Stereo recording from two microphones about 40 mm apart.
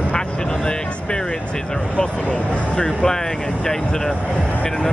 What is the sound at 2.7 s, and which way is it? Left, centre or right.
Speech, centre.